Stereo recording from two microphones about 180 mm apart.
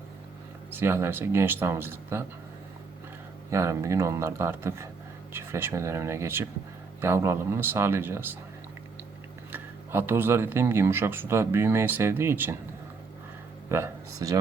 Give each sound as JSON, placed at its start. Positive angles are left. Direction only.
{"t": 0.7, "sound": "speech", "side_deg": -10}
{"t": 3.5, "sound": "speech", "side_deg": -15}
{"t": 9.5, "sound": "speech", "side_deg": -15}
{"t": 13.7, "sound": "speech", "side_deg": -15}